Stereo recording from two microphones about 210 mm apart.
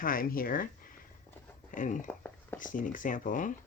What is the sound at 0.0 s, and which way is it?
Speech, 40° left (ahead or behind).